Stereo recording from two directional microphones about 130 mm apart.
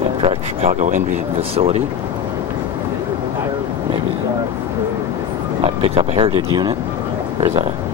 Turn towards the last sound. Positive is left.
turn(degrees=-55)  # may be behind; listen again after turning